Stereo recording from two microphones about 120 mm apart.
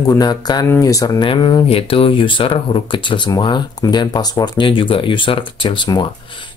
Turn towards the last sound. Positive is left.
turn(degrees=40)  # may be behind; listen again after turning